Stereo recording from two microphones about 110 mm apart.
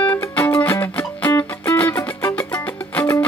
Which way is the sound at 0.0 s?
15° left (ahead or behind).